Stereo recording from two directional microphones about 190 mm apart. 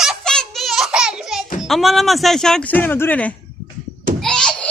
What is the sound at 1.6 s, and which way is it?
Speech, centre (ahead or behind).